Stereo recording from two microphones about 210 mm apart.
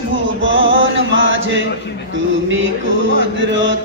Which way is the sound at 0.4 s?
65° right (ahead or behind).